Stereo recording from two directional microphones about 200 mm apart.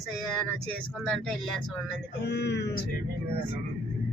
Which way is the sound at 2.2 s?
55° left (ahead or behind).